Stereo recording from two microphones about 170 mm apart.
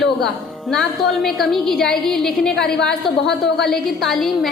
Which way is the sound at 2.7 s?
90° left.